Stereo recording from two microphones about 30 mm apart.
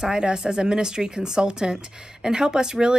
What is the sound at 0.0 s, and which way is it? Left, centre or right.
Speech, right.